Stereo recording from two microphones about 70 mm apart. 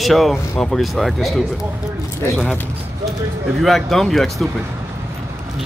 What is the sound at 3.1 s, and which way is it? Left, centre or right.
Speech, centre.